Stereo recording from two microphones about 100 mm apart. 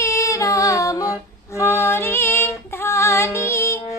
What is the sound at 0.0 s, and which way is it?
A capella, 30° left (ahead or behind).